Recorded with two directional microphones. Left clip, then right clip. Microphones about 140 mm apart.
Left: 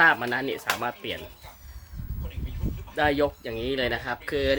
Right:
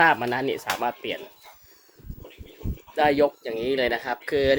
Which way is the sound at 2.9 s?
20° right (ahead or behind).